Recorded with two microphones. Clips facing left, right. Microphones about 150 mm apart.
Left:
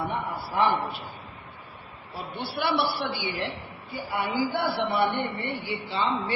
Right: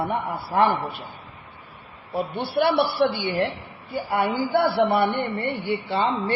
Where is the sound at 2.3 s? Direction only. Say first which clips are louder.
Right 6 dB; 55° right (ahead or behind).